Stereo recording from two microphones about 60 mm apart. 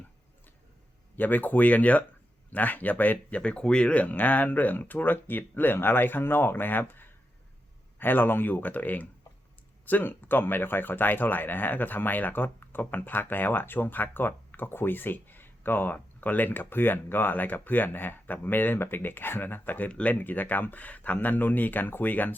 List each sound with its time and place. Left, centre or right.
1.1 s speech: left
19.9 s speech: centre
20.1 s speech: left